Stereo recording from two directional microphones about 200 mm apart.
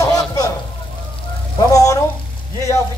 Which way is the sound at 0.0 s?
20° left (ahead or behind).